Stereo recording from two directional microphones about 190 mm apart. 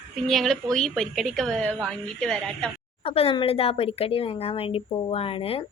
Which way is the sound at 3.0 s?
30° left (ahead or behind).